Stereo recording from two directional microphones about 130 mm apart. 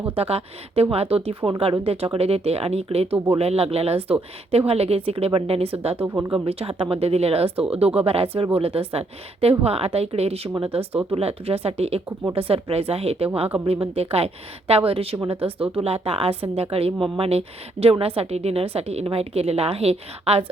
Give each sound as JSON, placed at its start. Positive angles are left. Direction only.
{"t": 0.2, "sound": "speech", "side_deg": -50}